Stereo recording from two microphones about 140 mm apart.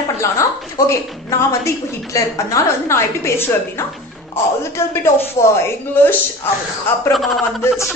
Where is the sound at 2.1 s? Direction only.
25° left (ahead or behind).